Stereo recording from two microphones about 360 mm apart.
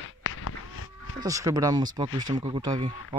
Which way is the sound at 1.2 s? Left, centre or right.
Centre.